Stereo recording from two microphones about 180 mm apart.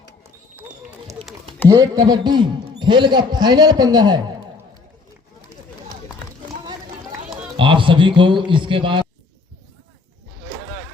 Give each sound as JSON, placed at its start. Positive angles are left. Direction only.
{"t": 1.6, "sound": "a man's voice", "side_deg": -20}
{"t": 7.5, "sound": "a man's voice", "side_deg": -30}